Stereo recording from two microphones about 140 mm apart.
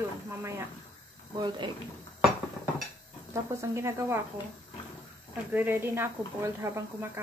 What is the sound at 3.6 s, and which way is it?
Speech, 20° right (ahead or behind).